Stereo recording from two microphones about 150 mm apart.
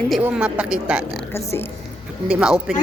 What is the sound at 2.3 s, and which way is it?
Speech, 5° right (ahead or behind).